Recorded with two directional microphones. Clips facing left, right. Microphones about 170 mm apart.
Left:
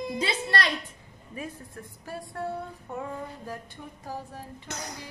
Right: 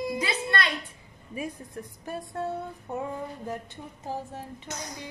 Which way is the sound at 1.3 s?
15° right (ahead or behind).